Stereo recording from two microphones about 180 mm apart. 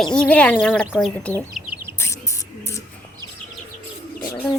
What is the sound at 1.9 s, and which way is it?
Bird, 15° left (ahead or behind).